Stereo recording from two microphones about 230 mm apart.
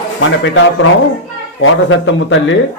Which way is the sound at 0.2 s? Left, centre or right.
Left.